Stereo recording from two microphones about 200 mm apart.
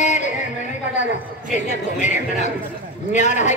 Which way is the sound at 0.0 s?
35° left (ahead or behind).